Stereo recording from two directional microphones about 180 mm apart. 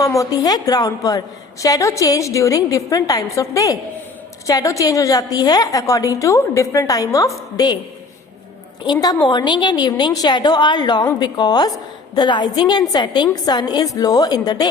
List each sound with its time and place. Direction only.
0.0 s a woman's voice: 20° left (ahead or behind)
8.8 s a woman's voice: 25° left (ahead or behind)